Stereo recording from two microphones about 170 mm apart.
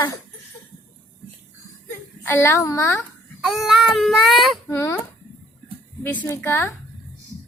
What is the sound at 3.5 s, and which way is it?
Speech, centre (ahead or behind).